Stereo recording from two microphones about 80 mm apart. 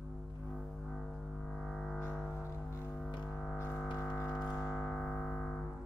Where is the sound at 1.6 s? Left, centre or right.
Centre.